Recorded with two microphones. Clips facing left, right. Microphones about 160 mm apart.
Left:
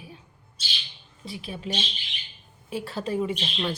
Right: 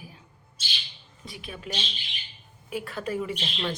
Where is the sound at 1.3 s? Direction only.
30° left (ahead or behind).